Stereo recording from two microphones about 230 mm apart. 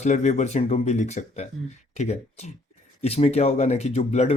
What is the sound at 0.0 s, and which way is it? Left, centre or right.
Speech, left.